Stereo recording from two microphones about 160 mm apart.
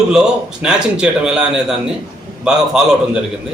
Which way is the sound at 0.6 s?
5° right (ahead or behind).